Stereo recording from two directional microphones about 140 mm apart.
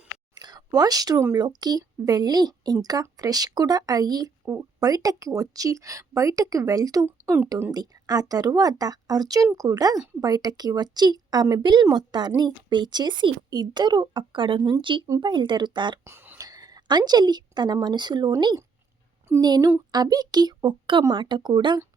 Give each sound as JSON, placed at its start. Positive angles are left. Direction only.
{"t": 0.3, "sound": "speech", "side_deg": -30}
{"t": 7.7, "sound": "speech", "side_deg": -25}
{"t": 16.0, "sound": "a sound", "side_deg": -15}
{"t": 16.4, "sound": "a woman's voice", "side_deg": -25}